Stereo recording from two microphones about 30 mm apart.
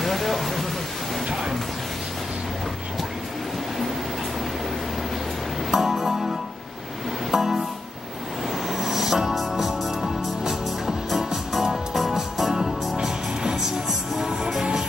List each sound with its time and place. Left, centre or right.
0.0 s a sound: centre
5.7 s music: centre
8.6 s music: centre
11.6 s music: centre
13.0 s music: right